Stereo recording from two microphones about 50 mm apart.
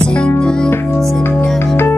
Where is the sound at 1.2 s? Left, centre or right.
Left.